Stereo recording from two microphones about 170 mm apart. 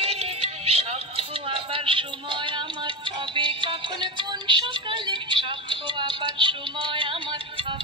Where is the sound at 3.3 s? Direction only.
30° right (ahead or behind).